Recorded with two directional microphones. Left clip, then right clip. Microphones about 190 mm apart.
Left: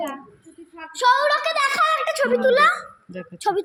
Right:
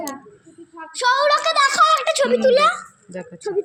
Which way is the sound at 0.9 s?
35° right (ahead or behind).